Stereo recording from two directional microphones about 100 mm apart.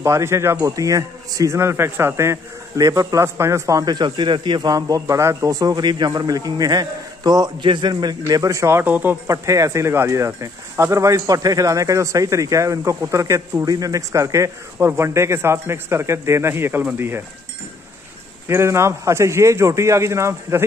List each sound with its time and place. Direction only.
0.0 s speech: 30° right (ahead or behind); by 8.4 s 45° right (ahead or behind)
8.4 s speech: 30° right (ahead or behind)
9.3 s speech: 35° right (ahead or behind)
18.5 s speech: 25° right (ahead or behind)